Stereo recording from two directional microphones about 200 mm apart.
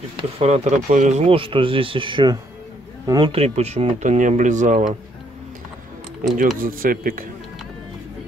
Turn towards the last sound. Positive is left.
turn(degrees=-45)  # may be behind; listen again after turning